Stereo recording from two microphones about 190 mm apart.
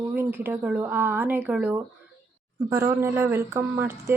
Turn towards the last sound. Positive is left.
turn(degrees=-10)  # may be behind; listen again after turning